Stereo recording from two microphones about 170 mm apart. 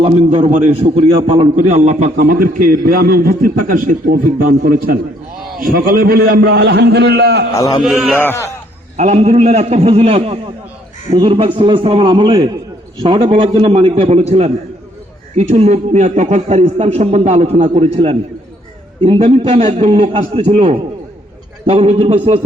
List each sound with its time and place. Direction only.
0.0 s a man's voice: 35° right (ahead or behind)
2.1 s a man's voice: 60° right (ahead or behind); by 7.4 s 75° right (ahead or behind)
7.5 s a man's voice: 20° left (ahead or behind)
7.8 s a man's voice: centre (ahead or behind)
8.2 s speech: 15° left (ahead or behind)
9.0 s a man's voice: 40° right (ahead or behind)